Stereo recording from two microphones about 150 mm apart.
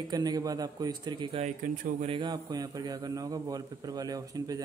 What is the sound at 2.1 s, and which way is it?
Speech, 30° right (ahead or behind).